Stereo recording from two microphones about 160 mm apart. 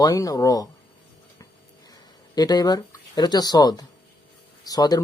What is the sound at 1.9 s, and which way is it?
Speech, 25° left (ahead or behind).